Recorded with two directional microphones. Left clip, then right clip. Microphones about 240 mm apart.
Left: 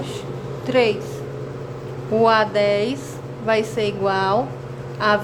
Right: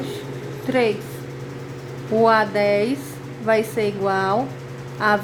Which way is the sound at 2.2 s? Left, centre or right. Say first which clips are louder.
Left 1 dB; centre.